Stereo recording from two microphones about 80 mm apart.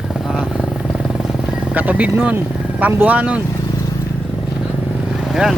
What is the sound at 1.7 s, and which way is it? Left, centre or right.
Speech, centre.